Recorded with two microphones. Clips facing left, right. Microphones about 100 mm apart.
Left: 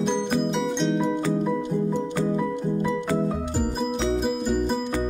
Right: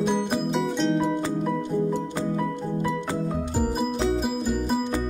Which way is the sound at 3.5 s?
5° right (ahead or behind).